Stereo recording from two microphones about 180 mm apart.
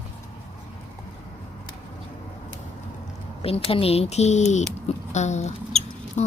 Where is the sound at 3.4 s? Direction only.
30° left (ahead or behind).